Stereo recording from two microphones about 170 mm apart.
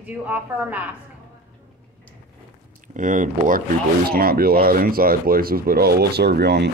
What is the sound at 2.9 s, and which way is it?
Speech, 50° right (ahead or behind).